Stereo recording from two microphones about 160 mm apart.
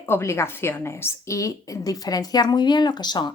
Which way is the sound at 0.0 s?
15° left (ahead or behind).